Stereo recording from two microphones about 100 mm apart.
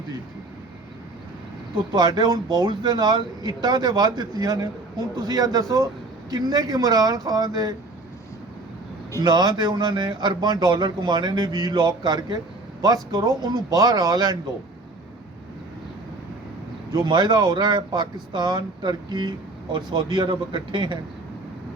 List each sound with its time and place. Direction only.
1.9 s speech: 45° right (ahead or behind)
9.2 s speech: 45° right (ahead or behind)
16.9 s speech: 45° right (ahead or behind)